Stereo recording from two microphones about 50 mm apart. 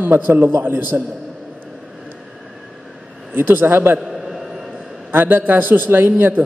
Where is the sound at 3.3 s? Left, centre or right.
Right.